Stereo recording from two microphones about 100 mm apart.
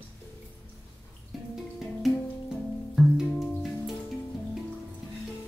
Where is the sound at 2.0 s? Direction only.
Centre (ahead or behind).